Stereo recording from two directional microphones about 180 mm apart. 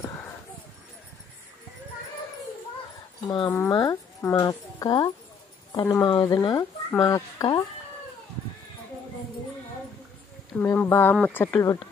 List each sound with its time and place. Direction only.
3.3 s speech: 25° left (ahead or behind)
10.5 s speech: 10° left (ahead or behind)